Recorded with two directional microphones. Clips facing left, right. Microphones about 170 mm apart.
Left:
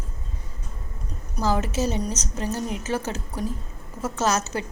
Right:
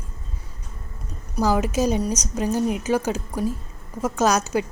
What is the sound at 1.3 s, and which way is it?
A woman's voice, 10° right (ahead or behind).